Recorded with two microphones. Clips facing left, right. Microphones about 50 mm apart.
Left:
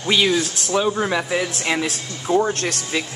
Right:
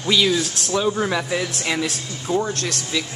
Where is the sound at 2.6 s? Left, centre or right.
Left.